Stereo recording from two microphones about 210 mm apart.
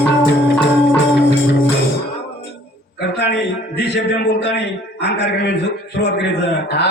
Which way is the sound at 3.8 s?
55° left (ahead or behind).